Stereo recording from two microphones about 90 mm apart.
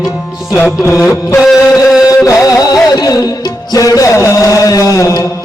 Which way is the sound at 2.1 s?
35° left (ahead or behind).